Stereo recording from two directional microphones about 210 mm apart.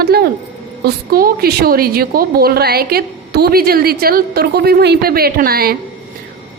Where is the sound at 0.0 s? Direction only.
50° right (ahead or behind).